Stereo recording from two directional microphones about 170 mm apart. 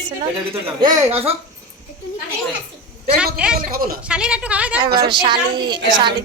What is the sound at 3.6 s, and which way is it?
Speech, 60° right (ahead or behind).